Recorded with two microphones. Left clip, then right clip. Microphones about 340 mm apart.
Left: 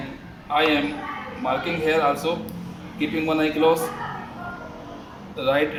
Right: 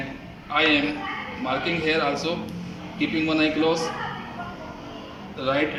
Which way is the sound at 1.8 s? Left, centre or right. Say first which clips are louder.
Left 5 dB; centre.